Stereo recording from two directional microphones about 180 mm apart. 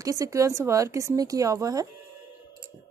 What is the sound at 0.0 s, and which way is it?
Speech, 20° right (ahead or behind).